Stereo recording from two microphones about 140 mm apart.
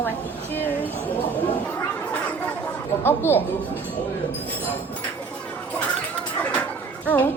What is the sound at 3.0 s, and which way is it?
Speech, 15° left (ahead or behind).